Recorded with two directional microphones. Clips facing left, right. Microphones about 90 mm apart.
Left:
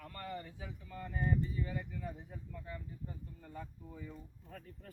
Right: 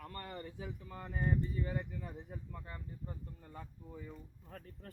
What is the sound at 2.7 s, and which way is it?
Speech, 45° right (ahead or behind).